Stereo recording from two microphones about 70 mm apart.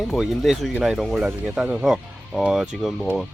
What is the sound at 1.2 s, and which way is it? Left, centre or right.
Speech, centre.